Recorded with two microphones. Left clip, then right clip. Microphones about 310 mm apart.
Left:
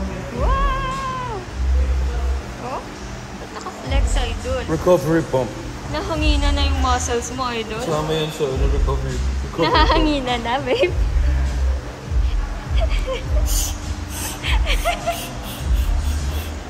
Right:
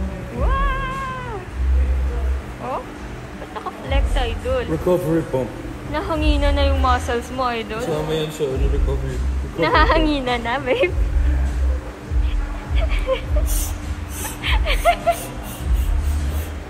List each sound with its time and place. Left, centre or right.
0.5 s music: centre
3.9 s music: centre
5.9 s a woman's voice: centre
9.6 s a woman's voice: centre
13.1 s a woman's voice: centre
14.4 s speech: centre